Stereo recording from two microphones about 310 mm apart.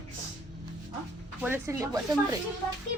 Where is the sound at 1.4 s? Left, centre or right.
Centre.